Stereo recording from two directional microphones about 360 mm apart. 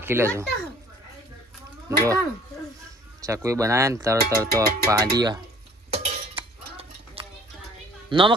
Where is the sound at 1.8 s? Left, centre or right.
Centre.